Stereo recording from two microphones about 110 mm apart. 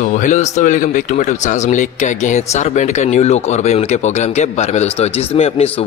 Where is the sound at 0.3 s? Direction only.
90° left.